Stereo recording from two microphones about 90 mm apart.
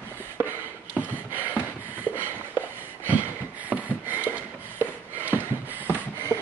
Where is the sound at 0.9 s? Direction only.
20° right (ahead or behind).